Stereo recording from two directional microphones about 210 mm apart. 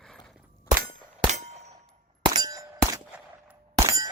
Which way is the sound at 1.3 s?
30° right (ahead or behind).